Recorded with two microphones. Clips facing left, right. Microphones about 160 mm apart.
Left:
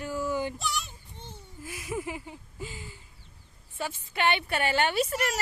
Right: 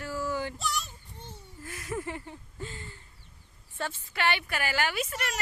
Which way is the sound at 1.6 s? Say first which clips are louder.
Left 1 dB; 10° left (ahead or behind).